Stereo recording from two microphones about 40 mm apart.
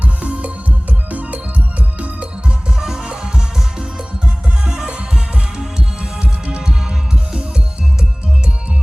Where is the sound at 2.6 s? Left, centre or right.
Centre.